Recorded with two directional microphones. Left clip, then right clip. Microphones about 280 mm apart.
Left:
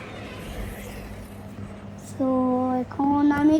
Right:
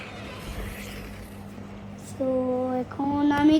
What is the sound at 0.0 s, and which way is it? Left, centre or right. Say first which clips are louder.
Vehicle: left 1 dB; centre.